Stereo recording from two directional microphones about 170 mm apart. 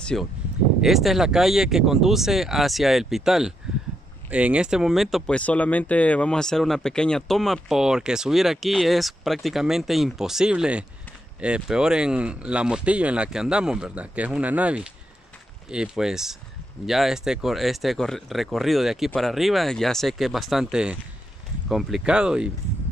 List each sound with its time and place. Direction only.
0.0 s speech: 5° left (ahead or behind)